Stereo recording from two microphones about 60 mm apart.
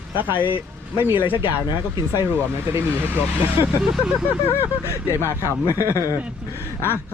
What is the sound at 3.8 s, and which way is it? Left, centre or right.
Speech, centre.